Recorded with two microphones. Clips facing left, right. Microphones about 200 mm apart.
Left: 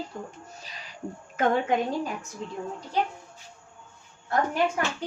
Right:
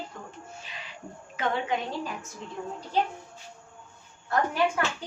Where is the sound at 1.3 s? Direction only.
45° left (ahead or behind).